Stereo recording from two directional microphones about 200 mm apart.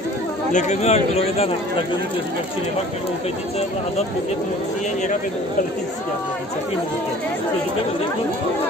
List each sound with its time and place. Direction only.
0.5 s speech: 35° left (ahead or behind)